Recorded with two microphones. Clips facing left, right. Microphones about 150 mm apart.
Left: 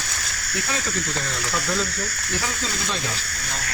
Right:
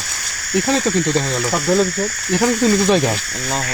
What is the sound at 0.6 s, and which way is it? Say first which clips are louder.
Speech: right 12 dB; 75° right (ahead or behind).